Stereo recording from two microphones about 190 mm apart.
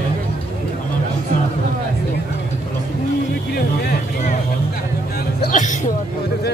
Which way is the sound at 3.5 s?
55° left (ahead or behind).